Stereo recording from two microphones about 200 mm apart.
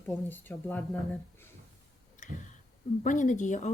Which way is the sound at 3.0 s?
40° left (ahead or behind).